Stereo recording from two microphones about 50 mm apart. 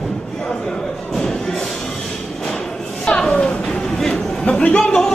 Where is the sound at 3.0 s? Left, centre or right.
Centre.